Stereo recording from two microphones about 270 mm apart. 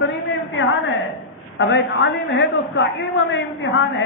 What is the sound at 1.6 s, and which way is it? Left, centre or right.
A woman's voice, left.